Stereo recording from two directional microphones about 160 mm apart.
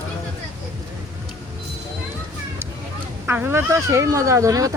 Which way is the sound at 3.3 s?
15° right (ahead or behind).